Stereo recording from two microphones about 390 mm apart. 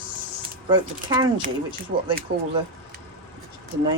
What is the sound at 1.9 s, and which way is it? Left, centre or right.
Speech, right.